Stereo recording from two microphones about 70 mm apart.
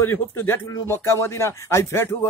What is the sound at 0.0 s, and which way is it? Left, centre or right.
A man's voice, left.